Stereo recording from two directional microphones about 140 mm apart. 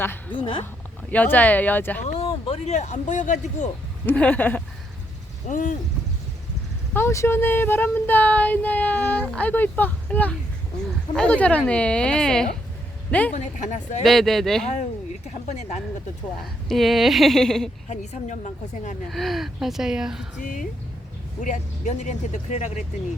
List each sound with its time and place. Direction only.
0.0 s speech: 15° left (ahead or behind)
0.3 s speech: 40° left (ahead or behind)
1.1 s speech: 10° left (ahead or behind)
2.1 s speech: 45° left (ahead or behind)
4.0 s speech: 10° left (ahead or behind)
5.5 s speech: 70° left (ahead or behind)
6.9 s speech: 20° left (ahead or behind)
13.3 s speech: 55° left (ahead or behind)
14.0 s speech: centre (ahead or behind)
14.7 s speech: 55° left (ahead or behind)
16.6 s speech: centre (ahead or behind)
17.8 s speech: 55° left (ahead or behind)
19.0 s speech: centre (ahead or behind)
20.4 s speech: 65° left (ahead or behind)